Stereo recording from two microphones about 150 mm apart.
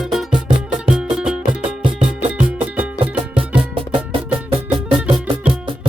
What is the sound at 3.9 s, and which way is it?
Music, 35° right (ahead or behind).